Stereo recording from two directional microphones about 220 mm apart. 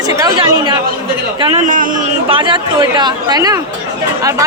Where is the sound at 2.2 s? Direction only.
20° right (ahead or behind).